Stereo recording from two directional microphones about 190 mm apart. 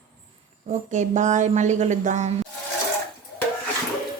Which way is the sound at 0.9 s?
40° right (ahead or behind).